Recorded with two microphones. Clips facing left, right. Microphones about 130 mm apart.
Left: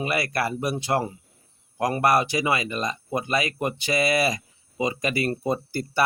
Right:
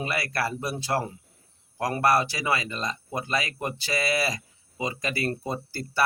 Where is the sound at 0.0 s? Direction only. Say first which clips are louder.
Left 3 dB; 20° left (ahead or behind).